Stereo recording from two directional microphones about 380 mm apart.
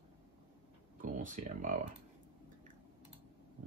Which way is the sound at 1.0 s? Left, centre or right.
Centre.